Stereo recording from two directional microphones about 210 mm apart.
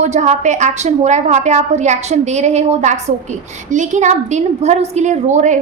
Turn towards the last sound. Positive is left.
turn(degrees=-35)  # may be behind; listen again after turning